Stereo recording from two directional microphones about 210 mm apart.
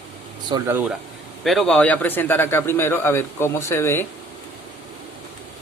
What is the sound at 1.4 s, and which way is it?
Speech, centre (ahead or behind).